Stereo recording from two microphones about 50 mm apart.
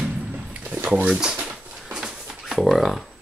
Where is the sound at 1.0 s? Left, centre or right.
Right.